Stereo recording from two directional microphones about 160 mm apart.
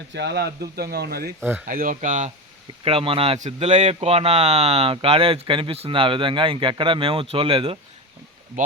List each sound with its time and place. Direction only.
0.1 s speech: 90° right
1.6 s speech: 60° right (ahead or behind)
2.8 s speech: 35° right (ahead or behind)
8.6 s speech: 55° right (ahead or behind)